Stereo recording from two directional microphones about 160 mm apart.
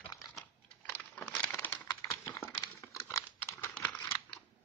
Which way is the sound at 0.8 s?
10° left (ahead or behind).